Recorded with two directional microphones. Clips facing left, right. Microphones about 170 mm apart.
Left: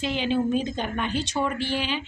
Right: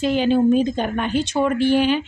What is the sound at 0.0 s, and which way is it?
A woman's voice, 45° right (ahead or behind).